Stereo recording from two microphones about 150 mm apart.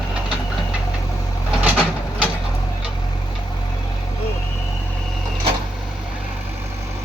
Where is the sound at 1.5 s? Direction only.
10° right (ahead or behind).